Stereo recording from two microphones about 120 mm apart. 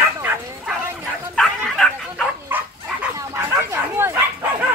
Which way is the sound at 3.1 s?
25° right (ahead or behind).